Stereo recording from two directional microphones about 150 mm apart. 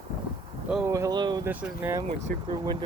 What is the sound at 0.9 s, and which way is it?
Speech, 20° right (ahead or behind).